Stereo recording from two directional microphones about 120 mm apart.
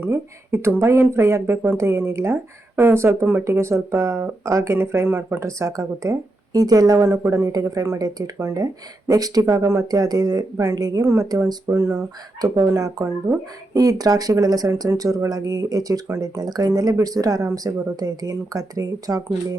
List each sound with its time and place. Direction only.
0.0 s speech: 20° right (ahead or behind)